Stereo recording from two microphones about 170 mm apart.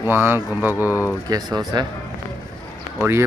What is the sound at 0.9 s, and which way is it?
Speech, 15° left (ahead or behind).